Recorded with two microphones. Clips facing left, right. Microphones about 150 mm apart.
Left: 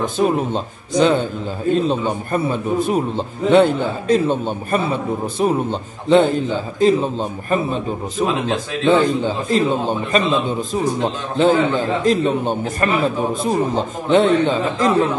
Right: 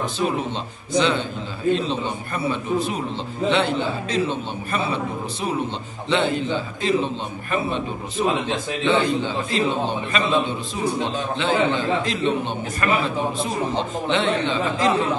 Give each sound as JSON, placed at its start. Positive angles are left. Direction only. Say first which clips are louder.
{"t": 0.0, "sound": "a man's voice", "louder": "left 6 dB", "side_deg": 45}